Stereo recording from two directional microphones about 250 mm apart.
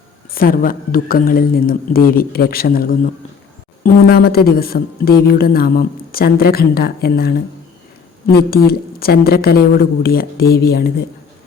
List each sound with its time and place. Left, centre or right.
0.3 s a woman's voice: left